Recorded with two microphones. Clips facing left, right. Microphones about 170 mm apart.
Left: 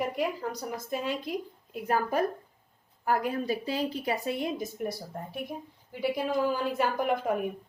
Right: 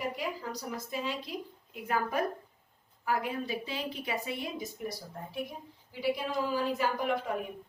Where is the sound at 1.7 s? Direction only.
40° left (ahead or behind).